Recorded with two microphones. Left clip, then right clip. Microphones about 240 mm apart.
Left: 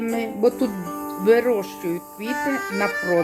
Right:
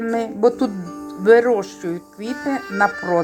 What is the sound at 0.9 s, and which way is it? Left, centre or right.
Music, left.